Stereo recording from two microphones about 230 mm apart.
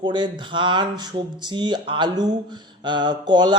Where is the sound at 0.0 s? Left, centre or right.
Centre.